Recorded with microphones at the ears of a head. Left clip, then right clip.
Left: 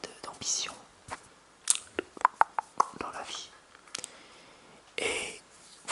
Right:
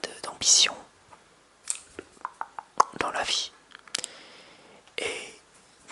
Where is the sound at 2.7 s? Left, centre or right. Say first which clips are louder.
Right 8 dB; right.